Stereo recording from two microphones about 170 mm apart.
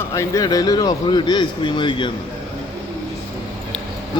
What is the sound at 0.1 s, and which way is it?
Speech, 20° left (ahead or behind).